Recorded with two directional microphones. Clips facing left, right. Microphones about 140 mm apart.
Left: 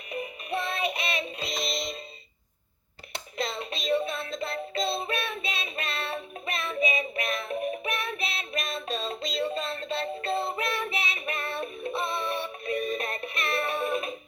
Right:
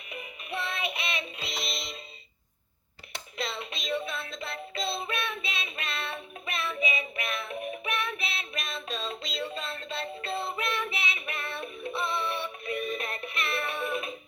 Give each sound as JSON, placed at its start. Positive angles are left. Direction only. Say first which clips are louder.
{"t": 0.1, "sound": "music", "louder": "left 6 dB", "side_deg": 40}
{"t": 3.3, "sound": "music", "louder": "left 3 dB", "side_deg": 40}